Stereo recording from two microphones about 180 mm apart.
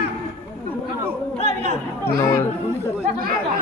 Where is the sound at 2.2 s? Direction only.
15° left (ahead or behind).